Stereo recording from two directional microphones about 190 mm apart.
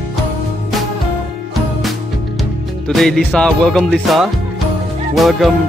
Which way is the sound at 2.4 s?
Centre (ahead or behind).